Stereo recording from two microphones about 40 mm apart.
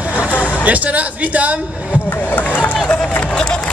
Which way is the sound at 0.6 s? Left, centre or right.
Right.